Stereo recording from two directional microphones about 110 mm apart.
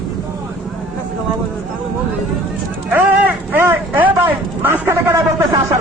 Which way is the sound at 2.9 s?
15° right (ahead or behind).